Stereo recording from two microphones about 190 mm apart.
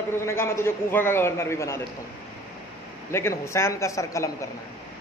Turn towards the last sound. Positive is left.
turn(degrees=15)  # may be behind; listen again after turning